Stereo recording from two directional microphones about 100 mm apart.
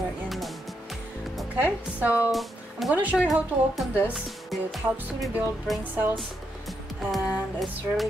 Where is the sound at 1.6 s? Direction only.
15° right (ahead or behind).